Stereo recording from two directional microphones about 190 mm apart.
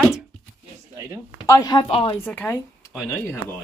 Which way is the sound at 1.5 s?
20° left (ahead or behind).